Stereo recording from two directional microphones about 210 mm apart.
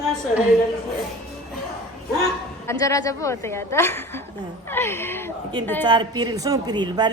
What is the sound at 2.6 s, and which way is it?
A woman's voice, 15° left (ahead or behind).